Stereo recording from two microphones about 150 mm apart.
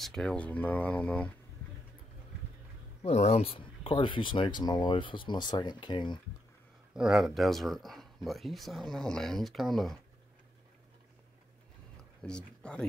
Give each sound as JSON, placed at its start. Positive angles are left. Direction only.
{"t": 0.0, "sound": "speech", "side_deg": 5}
{"t": 3.0, "sound": "speech", "side_deg": 45}
{"t": 6.9, "sound": "speech", "side_deg": -5}
{"t": 12.2, "sound": "speech", "side_deg": 5}